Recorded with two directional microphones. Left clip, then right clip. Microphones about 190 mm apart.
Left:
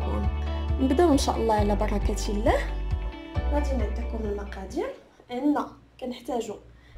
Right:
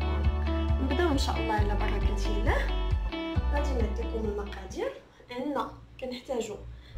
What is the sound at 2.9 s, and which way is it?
Music, centre (ahead or behind).